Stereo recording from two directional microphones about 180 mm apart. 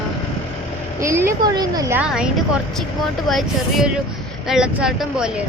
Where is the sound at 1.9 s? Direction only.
5° right (ahead or behind).